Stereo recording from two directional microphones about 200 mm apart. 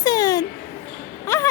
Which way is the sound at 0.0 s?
20° left (ahead or behind).